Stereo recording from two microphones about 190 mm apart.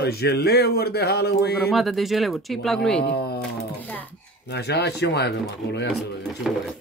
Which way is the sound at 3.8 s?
10° left (ahead or behind).